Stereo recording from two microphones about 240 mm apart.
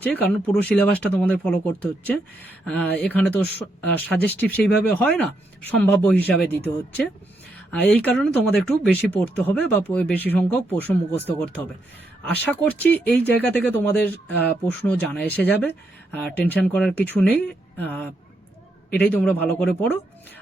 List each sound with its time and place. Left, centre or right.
0.0 s speech: centre